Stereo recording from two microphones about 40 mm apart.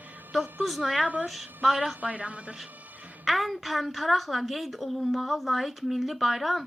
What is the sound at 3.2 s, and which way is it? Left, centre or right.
A woman's voice, centre.